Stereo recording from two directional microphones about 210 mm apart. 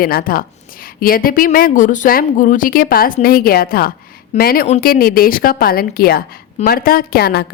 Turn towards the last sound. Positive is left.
turn(degrees=50)  # may be behind; listen again after turning